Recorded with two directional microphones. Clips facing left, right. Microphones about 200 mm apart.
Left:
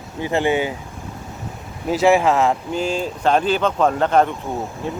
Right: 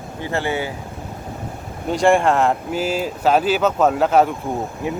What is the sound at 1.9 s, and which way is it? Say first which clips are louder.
Speech: even; 5° left (ahead or behind).